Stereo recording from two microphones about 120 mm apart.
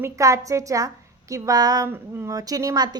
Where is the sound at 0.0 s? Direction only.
25° right (ahead or behind).